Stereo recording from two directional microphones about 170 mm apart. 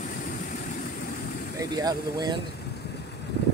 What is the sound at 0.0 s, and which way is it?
Vehicle, 50° left (ahead or behind).